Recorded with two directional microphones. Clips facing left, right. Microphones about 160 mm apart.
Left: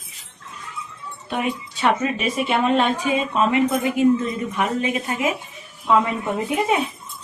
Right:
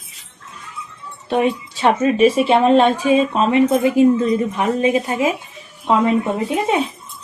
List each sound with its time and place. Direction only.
1.3 s speech: 30° right (ahead or behind)